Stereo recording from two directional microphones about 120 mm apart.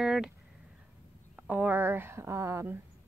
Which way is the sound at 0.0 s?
5° right (ahead or behind).